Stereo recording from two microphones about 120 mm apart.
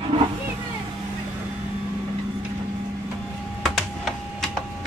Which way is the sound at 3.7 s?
Centre (ahead or behind).